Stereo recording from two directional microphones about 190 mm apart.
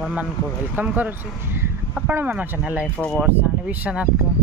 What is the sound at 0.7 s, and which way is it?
Speech, 10° right (ahead or behind).